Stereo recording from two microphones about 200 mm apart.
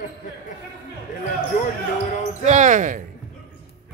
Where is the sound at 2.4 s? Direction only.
35° right (ahead or behind).